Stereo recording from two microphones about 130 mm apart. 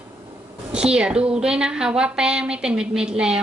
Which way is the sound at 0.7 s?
5° right (ahead or behind).